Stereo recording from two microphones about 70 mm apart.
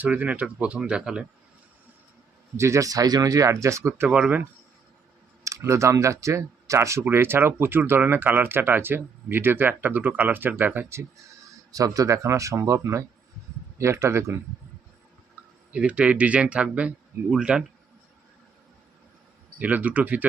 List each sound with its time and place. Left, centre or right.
0.0 s speech: right
2.6 s speech: right
4.1 s speech: centre
5.4 s speech: right
7.1 s speech: right
11.7 s speech: right
15.4 s a sound: right
15.7 s speech: centre
19.5 s speech: right